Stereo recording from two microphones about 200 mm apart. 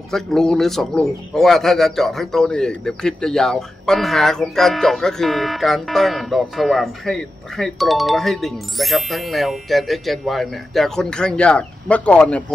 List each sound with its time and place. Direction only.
0.1 s a man's voice: centre (ahead or behind)